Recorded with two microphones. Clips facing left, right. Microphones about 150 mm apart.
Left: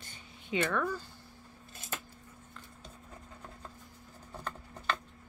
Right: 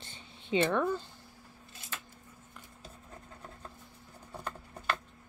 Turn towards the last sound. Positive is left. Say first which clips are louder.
# even
turn(degrees=-10)  # may be behind; listen again after turning